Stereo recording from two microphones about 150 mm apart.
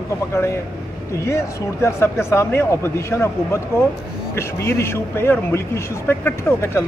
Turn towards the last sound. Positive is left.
turn(degrees=15)  # may be behind; listen again after turning